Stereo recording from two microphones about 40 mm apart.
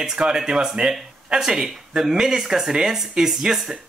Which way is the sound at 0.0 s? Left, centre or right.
Centre.